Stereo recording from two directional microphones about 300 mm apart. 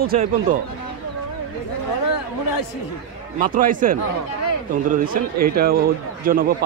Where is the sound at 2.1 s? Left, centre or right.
Left.